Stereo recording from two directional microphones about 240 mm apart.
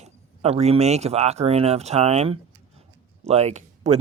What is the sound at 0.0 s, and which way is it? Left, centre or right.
Speech, right.